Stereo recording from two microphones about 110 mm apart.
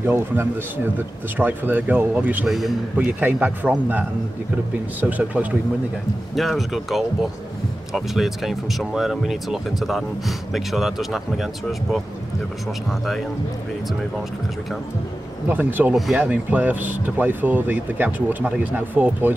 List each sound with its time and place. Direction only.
0.0 s speech: 20° right (ahead or behind)
2.4 s speech: 5° right (ahead or behind)
3.1 s speech: 15° right (ahead or behind)
5.0 s speech: 15° right (ahead or behind)
6.3 s speech: centre (ahead or behind)
15.4 s speech: 15° right (ahead or behind)